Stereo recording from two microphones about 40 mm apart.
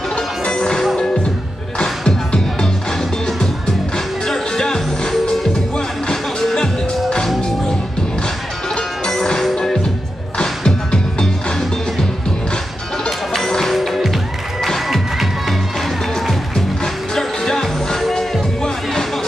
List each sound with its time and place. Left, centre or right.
0.1 s music: left
3.3 s music: centre
8.7 s music: centre
13.5 s music: centre
13.7 s music: centre
16.5 s music: centre